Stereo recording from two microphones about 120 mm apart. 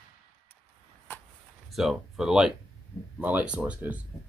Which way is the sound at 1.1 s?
15° left (ahead or behind).